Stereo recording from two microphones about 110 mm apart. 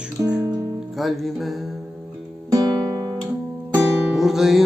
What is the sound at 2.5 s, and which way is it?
Music, 35° right (ahead or behind).